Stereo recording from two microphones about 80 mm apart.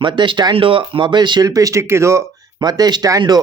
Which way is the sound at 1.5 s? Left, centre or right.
Right.